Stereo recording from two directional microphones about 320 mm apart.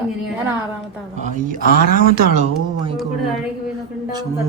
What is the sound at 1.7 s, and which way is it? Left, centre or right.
Speech, left.